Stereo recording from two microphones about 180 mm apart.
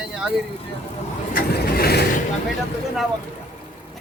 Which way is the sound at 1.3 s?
55° left (ahead or behind).